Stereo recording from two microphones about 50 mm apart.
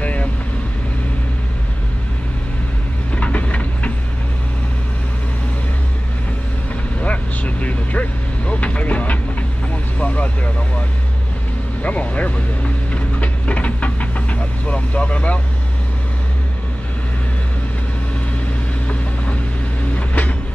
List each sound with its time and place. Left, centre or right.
0.0 s vehicle: left
3.2 s a sound: left
7.0 s vehicle: left
11.8 s vehicle: left
20.0 s train: left